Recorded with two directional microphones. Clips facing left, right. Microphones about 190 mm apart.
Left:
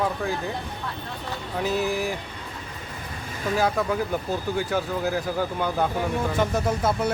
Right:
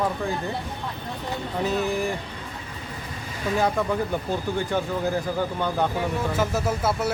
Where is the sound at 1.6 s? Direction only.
Centre (ahead or behind).